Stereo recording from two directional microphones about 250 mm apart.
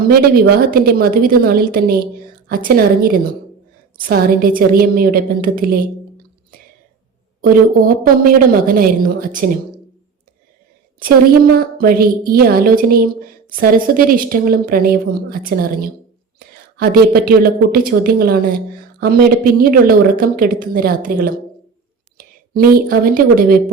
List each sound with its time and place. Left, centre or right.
0.1 s speech: right
7.4 s speech: right
11.8 s a woman's voice: right